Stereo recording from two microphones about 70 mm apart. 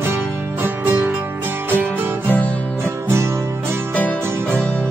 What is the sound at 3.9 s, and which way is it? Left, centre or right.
Music, left.